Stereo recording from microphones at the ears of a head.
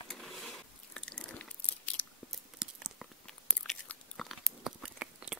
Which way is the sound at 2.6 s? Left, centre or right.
Right.